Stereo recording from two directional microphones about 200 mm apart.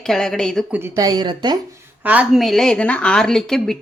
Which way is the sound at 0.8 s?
15° right (ahead or behind).